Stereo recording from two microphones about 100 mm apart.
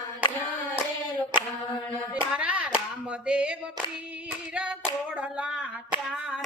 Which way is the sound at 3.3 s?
10° right (ahead or behind).